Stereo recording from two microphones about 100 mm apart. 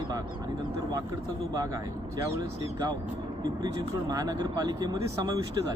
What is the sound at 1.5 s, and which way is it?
Speech, 35° right (ahead or behind).